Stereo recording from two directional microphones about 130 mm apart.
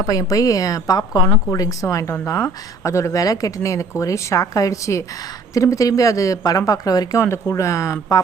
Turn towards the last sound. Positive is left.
turn(degrees=25)  # may be behind; listen again after turning